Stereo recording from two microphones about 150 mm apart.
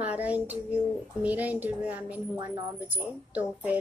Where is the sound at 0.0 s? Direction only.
10° right (ahead or behind).